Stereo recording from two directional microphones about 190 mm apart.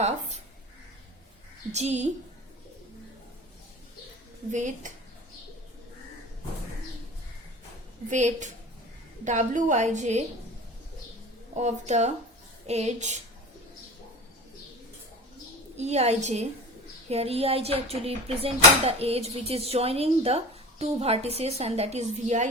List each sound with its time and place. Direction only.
0.0 s a sound: 35° right (ahead or behind)
1.7 s speech: 35° right (ahead or behind)
4.5 s speech: 40° right (ahead or behind)
8.1 s speech: 40° right (ahead or behind)
11.5 s speech: 35° right (ahead or behind)
15.8 s speech: 35° right (ahead or behind)